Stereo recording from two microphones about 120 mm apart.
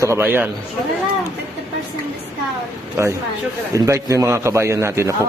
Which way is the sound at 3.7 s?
25° right (ahead or behind).